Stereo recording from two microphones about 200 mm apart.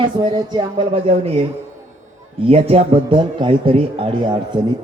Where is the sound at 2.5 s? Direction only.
30° right (ahead or behind).